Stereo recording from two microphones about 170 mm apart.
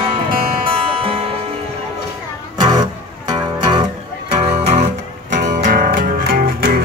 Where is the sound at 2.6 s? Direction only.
25° right (ahead or behind).